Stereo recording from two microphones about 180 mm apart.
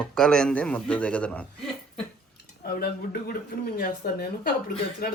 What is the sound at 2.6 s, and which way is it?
Speech, 60° left (ahead or behind).